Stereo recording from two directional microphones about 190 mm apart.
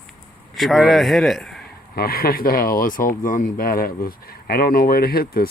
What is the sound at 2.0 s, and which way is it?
Speech, 50° left (ahead or behind).